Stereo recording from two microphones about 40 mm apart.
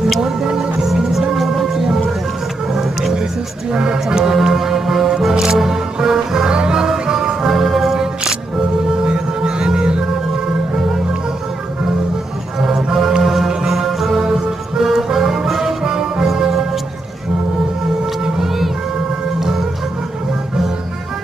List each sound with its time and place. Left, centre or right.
0.2 s music: centre
2.7 s a sound: centre
3.7 s music: right; by 8.0 s centre
8.5 s music: right
12.6 s music: centre
15.8 s music: centre
16.3 s music: centre
18.4 s music: centre